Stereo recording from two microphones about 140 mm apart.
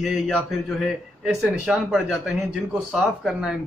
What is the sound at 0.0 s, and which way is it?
Speech, 5° right (ahead or behind).